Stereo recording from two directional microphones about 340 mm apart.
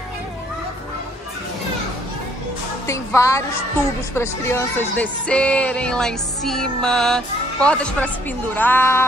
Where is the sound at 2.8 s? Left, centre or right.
Centre.